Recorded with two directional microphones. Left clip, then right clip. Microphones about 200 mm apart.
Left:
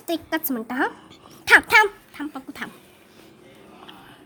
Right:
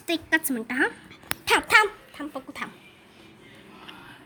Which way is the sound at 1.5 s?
15° left (ahead or behind).